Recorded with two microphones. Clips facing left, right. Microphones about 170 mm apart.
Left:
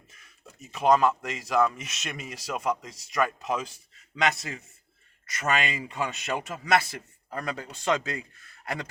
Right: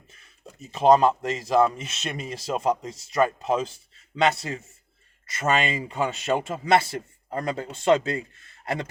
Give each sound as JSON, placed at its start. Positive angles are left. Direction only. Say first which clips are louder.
{"t": 0.6, "sound": "speech", "louder": "right 4 dB", "side_deg": -30}